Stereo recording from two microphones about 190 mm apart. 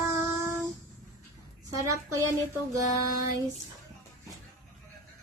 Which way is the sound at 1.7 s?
15° right (ahead or behind).